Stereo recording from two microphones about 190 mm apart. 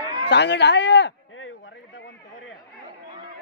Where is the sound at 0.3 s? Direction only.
65° left (ahead or behind).